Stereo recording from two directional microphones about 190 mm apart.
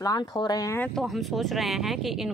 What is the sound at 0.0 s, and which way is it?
Speech, 20° left (ahead or behind).